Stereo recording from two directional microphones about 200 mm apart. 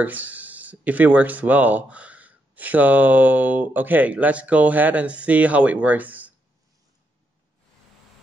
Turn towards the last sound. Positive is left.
turn(degrees=-10)  # may be behind; listen again after turning